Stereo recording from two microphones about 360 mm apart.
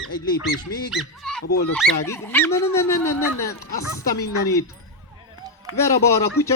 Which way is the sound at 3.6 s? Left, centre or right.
Left.